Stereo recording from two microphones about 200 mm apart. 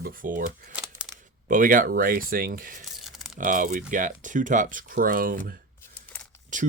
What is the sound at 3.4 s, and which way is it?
Speech, 40° right (ahead or behind).